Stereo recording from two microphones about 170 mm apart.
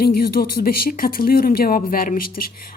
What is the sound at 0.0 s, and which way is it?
Speech, 60° left (ahead or behind).